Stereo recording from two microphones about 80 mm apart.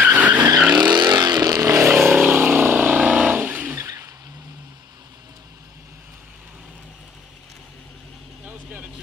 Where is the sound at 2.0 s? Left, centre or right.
Right.